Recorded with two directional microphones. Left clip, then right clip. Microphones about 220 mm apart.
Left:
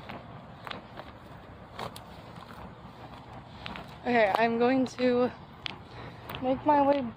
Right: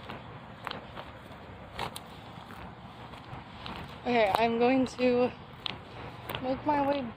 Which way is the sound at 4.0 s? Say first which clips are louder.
Left 1 dB; 10° left (ahead or behind).